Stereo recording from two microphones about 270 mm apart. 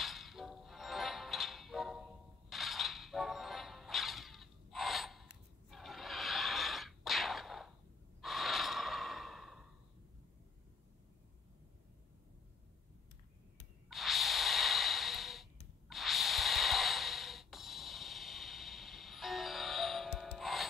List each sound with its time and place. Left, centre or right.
0.0 s music: centre
5.7 s a sound: centre
8.2 s breathing: centre
13.8 s snort: centre